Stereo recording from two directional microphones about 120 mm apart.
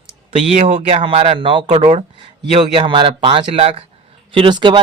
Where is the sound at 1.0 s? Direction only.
50° right (ahead or behind).